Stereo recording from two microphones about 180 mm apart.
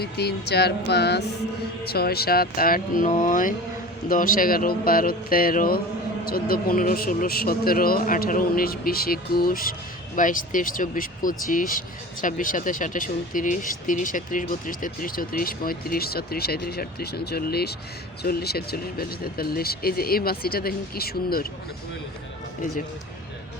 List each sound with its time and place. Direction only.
0.0 s music: 65° left (ahead or behind)
1.8 s speech: 60° left (ahead or behind)